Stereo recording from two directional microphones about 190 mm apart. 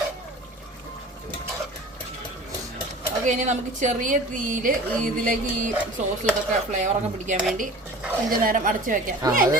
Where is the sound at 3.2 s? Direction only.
40° right (ahead or behind).